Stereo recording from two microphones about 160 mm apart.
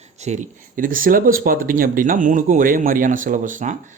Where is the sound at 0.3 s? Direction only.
55° right (ahead or behind).